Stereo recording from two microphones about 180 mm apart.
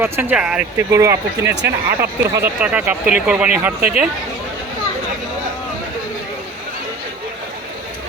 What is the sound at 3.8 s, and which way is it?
Speech, 55° right (ahead or behind).